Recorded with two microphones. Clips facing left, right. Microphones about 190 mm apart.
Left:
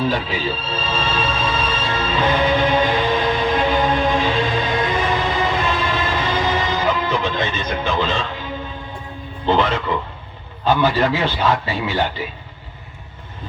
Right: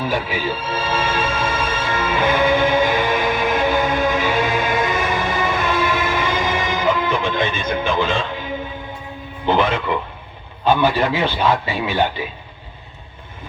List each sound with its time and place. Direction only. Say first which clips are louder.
0.0 s speech: left 1 dB; 10° right (ahead or behind)
1.5 s music: even; 10° right (ahead or behind)
5.6 s train: right 2 dB; 10° right (ahead or behind)
7.7 s a man's voice: right 1 dB; 15° right (ahead or behind)
8.3 s music: right 2 dB; 15° right (ahead or behind)
9.5 s a man's voice: even; 15° right (ahead or behind)